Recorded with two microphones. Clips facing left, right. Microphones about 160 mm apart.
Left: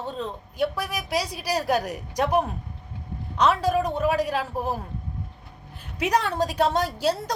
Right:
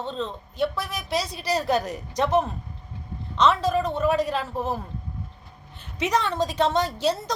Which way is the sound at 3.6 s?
10° left (ahead or behind).